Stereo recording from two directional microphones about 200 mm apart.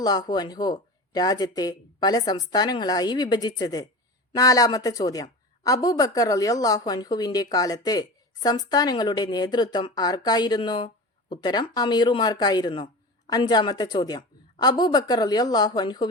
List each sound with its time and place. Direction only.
0.0 s a woman's voice: 20° left (ahead or behind)